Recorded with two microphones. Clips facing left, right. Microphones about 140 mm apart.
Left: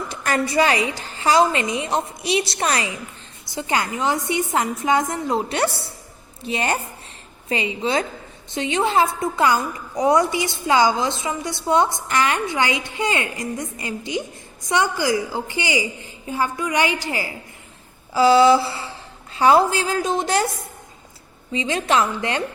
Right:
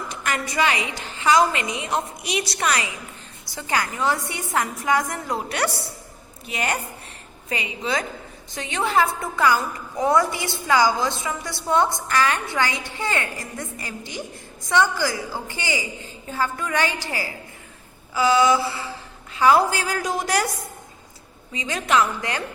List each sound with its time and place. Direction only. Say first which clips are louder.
0.1 s a woman's voice: left 6 dB; 35° left (ahead or behind); by 17.3 s 20° left (ahead or behind)
18.1 s a woman's voice: left 5 dB; 30° left (ahead or behind)
21.5 s a woman's voice: left 2 dB; 25° left (ahead or behind)